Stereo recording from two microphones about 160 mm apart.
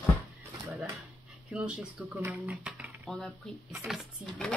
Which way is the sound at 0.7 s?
10° right (ahead or behind).